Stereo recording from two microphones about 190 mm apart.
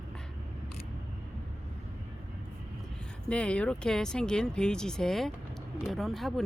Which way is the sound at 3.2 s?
5° left (ahead or behind).